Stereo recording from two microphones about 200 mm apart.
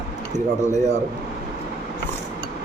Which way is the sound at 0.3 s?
35° right (ahead or behind).